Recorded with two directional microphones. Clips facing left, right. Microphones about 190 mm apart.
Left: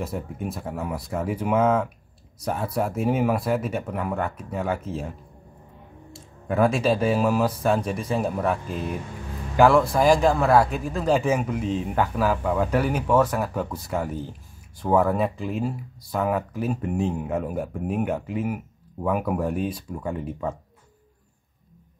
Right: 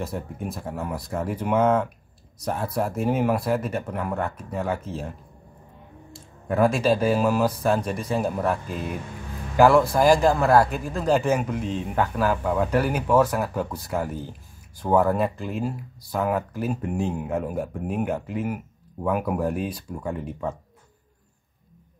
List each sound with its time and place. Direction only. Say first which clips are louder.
0.0 s speech: left 1 dB; 5° left (ahead or behind)
6.1 s speech: even; centre (ahead or behind)